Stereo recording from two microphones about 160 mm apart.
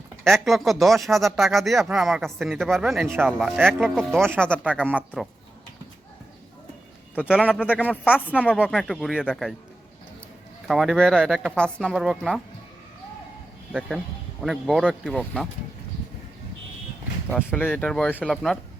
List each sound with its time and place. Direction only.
0.3 s speech: centre (ahead or behind)
4.5 s speech: 10° right (ahead or behind)
7.3 s speech: 5° right (ahead or behind)
8.3 s speech: 10° left (ahead or behind)
8.5 s speech: centre (ahead or behind)
10.7 s speech: centre (ahead or behind)
13.7 s speech: centre (ahead or behind)
17.2 s speech: 10° left (ahead or behind)